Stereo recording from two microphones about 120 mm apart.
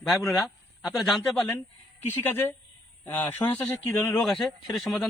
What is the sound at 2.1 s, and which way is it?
A man's voice, 20° left (ahead or behind).